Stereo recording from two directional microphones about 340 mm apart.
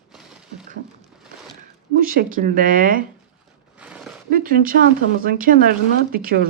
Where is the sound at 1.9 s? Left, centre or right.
Right.